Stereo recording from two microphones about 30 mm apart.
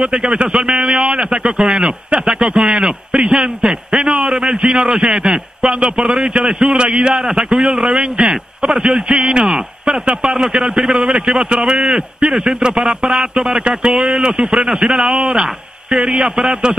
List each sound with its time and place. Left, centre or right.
0.0 s a man's voice: right
2.2 s a man's voice: right
7.2 s a man's voice: centre
13.3 s a man's voice: right
14.8 s a man's voice: right